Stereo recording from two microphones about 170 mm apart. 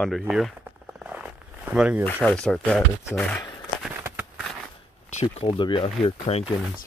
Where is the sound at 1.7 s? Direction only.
5° right (ahead or behind).